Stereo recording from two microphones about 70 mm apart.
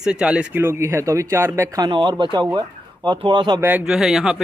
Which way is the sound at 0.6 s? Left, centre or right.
Right.